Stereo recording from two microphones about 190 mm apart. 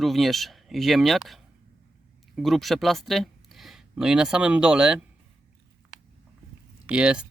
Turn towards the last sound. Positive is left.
turn(degrees=-5)  # may be behind; listen again after turning